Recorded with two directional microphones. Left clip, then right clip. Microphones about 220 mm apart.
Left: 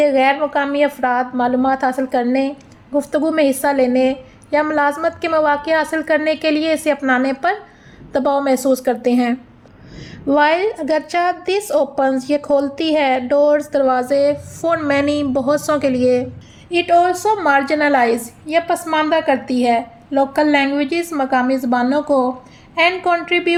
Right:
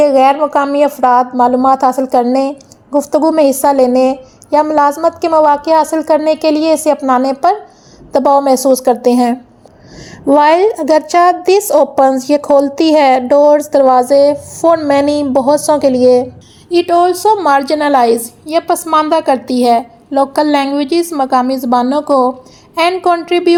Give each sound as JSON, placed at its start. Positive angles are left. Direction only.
{"t": 0.0, "sound": "a woman's voice", "side_deg": -15}
{"t": 10.4, "sound": "a woman's voice", "side_deg": -20}